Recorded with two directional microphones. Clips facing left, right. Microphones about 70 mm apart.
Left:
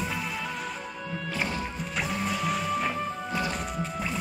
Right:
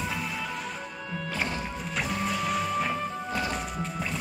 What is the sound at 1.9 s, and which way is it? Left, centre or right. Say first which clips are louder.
Music: right 1 dB; centre.